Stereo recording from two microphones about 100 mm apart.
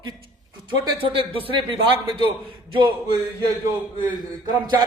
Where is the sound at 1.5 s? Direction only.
55° right (ahead or behind).